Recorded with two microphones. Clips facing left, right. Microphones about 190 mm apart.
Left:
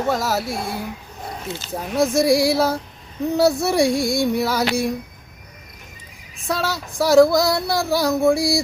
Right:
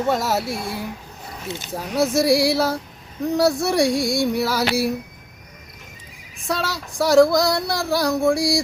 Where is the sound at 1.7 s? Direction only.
Centre (ahead or behind).